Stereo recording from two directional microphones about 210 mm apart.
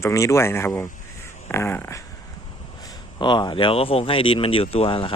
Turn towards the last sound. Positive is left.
turn(degrees=25)  # may be behind; listen again after turning